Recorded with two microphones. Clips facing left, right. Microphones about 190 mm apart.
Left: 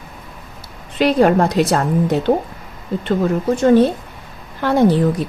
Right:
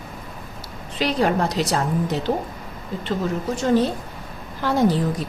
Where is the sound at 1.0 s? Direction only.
55° left (ahead or behind).